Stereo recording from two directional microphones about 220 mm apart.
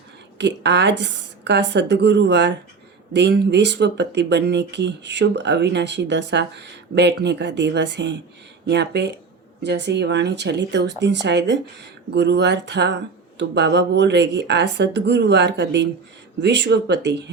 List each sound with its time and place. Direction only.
0.3 s speech: 50° right (ahead or behind)